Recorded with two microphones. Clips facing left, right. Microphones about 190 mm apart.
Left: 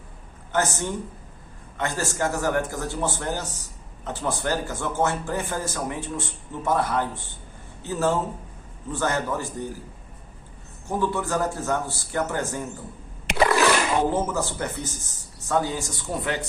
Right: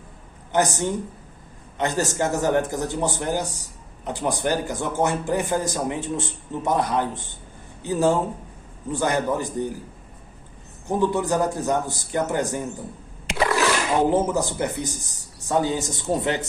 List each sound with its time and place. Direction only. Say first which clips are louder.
0.5 s speech: right 3 dB; 15° right (ahead or behind)
10.8 s speech: right 4 dB; 20° right (ahead or behind)
13.5 s splash: left 1 dB; 60° left (ahead or behind)
14.1 s speech: right 4 dB; 15° right (ahead or behind)